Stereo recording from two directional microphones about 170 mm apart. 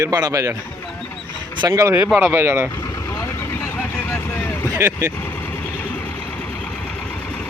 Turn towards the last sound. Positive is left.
turn(degrees=10)  # may be behind; listen again after turning